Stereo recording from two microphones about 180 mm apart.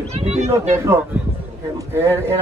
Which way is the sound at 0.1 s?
35° right (ahead or behind).